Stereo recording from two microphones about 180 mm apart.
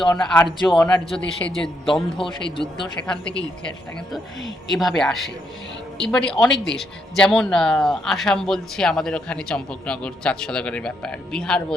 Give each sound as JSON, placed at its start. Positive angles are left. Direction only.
{"t": 0.2, "sound": "speech", "side_deg": 5}
{"t": 2.1, "sound": "a man's voice", "side_deg": 30}
{"t": 4.7, "sound": "speech", "side_deg": 0}